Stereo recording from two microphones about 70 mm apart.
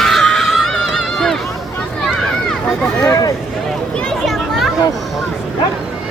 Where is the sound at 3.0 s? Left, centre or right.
Left.